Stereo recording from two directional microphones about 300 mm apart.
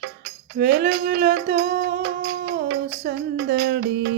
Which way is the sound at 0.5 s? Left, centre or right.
Right.